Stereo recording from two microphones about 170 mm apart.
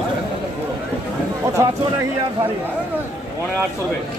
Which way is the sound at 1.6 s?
20° right (ahead or behind).